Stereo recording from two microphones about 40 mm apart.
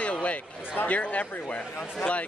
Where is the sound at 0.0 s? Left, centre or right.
Left.